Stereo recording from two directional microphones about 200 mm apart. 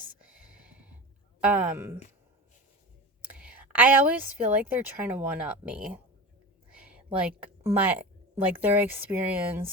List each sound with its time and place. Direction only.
0.0 s a sound: 5° right (ahead or behind)
1.4 s speech: 5° right (ahead or behind)
3.2 s a woman's voice: 5° right (ahead or behind)